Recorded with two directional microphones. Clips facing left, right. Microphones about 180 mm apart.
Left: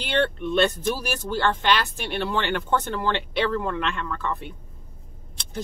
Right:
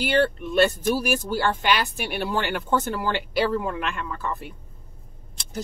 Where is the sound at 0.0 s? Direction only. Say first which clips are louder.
Right 2 dB; 5° right (ahead or behind).